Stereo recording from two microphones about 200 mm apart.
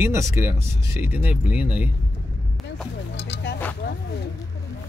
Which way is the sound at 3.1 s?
60° left (ahead or behind).